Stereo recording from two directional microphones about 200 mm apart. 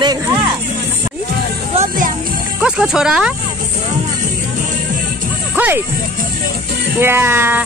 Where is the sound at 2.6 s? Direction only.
5° right (ahead or behind).